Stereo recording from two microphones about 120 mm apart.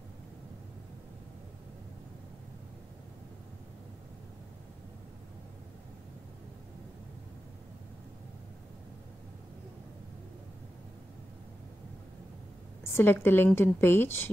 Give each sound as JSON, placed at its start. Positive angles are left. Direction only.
{"t": 12.9, "sound": "speech", "side_deg": 20}